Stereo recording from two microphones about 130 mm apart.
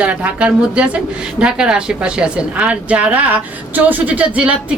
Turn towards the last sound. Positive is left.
turn(degrees=-10)  # may be behind; listen again after turning